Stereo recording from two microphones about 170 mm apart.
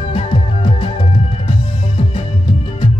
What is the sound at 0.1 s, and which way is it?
Music, 35° left (ahead or behind).